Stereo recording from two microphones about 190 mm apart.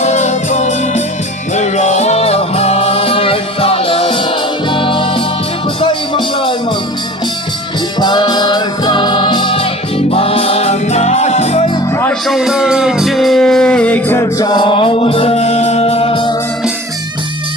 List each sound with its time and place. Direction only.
0.0 s music: 40° left (ahead or behind)
7.9 s music: 25° left (ahead or behind)
12.2 s music: centre (ahead or behind); by 16.3 s 30° left (ahead or behind)